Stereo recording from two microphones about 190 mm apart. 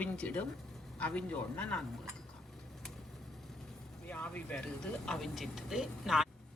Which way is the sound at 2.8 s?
Centre (ahead or behind).